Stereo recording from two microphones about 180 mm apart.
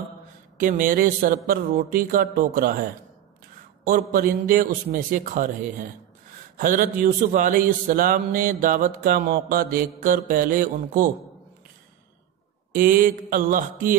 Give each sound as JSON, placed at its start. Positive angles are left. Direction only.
{"t": 0.6, "sound": "speech", "side_deg": -50}
{"t": 3.8, "sound": "speech", "side_deg": -50}
{"t": 12.7, "sound": "speech", "side_deg": -50}